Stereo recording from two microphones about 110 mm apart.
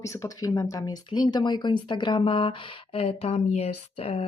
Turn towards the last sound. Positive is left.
turn(degrees=65)  # may be behind; listen again after turning